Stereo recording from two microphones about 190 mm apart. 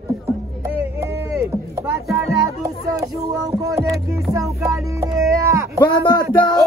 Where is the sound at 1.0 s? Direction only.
15° right (ahead or behind).